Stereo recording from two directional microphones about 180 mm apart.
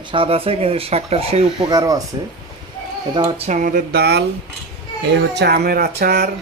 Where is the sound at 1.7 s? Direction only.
20° right (ahead or behind).